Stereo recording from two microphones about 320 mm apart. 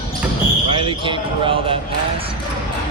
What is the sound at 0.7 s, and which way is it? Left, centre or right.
Speech, centre.